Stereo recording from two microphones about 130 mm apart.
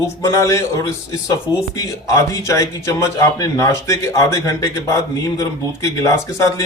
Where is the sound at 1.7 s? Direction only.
25° left (ahead or behind).